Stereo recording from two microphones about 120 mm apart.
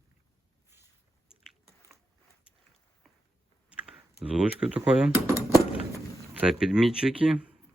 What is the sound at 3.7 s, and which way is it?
Computer keyboard, 10° right (ahead or behind).